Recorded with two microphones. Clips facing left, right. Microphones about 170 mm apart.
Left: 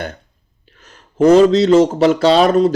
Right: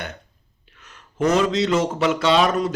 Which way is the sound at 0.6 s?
35° left (ahead or behind).